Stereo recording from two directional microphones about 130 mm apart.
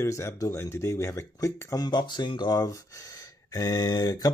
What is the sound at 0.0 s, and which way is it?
Speech, 20° left (ahead or behind).